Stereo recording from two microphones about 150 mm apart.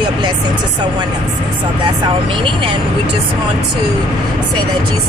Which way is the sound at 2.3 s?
35° right (ahead or behind).